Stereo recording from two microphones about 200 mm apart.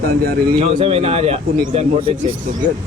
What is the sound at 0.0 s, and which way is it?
Speech, 50° right (ahead or behind).